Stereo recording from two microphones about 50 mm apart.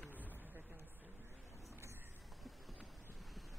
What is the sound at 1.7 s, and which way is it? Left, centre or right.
Vehicle, right.